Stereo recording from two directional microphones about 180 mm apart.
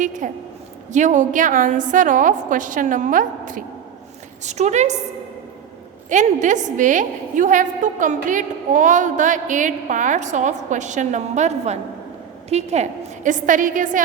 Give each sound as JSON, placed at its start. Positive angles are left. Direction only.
{"t": 0.0, "sound": "a woman's voice", "side_deg": -45}
{"t": 6.1, "sound": "a woman's voice", "side_deg": -45}